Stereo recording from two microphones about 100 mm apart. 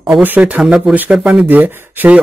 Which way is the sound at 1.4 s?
20° right (ahead or behind).